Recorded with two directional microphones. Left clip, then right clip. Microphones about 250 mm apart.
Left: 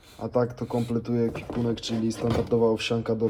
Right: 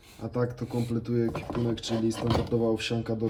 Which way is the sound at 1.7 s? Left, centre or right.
Centre.